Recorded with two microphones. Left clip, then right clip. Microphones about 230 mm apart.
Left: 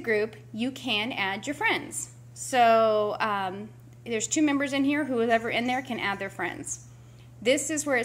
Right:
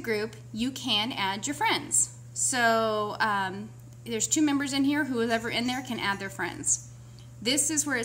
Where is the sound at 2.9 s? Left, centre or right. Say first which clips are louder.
Left 2 dB; right.